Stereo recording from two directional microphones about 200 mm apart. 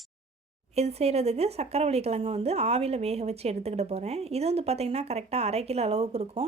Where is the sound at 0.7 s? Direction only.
30° right (ahead or behind).